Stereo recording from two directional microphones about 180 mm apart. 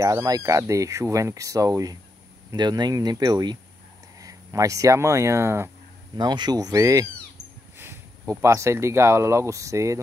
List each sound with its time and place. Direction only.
0.0 s speech: 20° right (ahead or behind)